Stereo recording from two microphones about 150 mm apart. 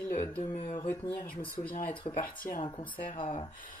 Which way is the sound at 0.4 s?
50° left (ahead or behind).